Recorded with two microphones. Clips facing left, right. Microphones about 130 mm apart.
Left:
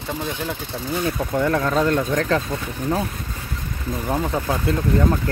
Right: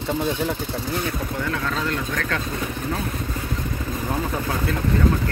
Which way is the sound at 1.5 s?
40° left (ahead or behind).